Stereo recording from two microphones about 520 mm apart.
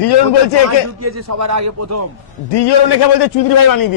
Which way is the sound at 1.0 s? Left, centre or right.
Right.